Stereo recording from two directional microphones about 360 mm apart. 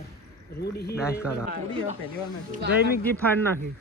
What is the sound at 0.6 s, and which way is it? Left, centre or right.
Speech, left.